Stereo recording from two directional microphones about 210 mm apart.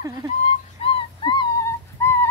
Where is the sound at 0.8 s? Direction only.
20° left (ahead or behind).